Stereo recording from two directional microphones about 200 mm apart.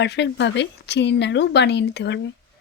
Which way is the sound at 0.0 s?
60° left (ahead or behind).